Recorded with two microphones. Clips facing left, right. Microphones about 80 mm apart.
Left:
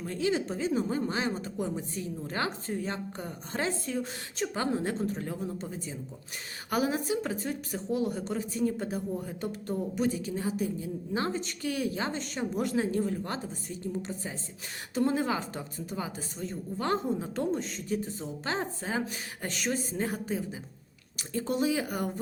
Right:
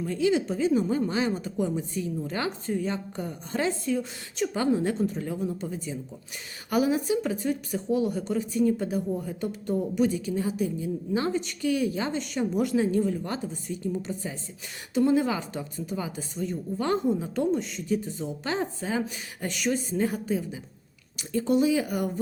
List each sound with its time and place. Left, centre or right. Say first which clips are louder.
0.0 s speech: right 5 dB; left